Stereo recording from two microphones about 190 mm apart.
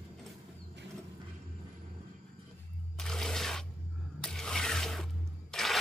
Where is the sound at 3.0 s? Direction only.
5° left (ahead or behind).